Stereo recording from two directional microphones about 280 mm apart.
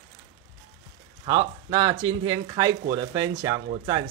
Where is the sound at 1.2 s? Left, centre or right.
Centre.